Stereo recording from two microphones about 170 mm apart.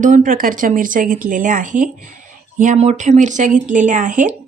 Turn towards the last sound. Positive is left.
turn(degrees=-50)  # may be behind; listen again after turning